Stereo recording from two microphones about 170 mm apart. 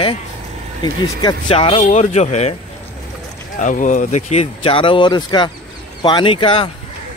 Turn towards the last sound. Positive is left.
turn(degrees=30)  # may be behind; listen again after turning